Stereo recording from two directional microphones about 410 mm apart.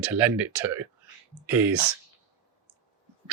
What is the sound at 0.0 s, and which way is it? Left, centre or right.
Speech, centre.